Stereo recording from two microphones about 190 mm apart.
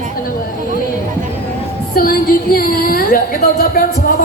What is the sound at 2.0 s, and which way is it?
Speech, 50° left (ahead or behind).